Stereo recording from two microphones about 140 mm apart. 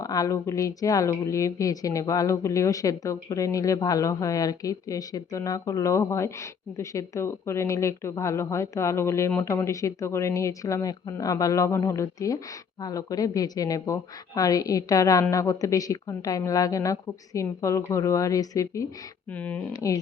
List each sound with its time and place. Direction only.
0.0 s a woman's voice: 25° left (ahead or behind)
19.3 s speech: 10° left (ahead or behind)
19.7 s a woman's voice: 25° left (ahead or behind)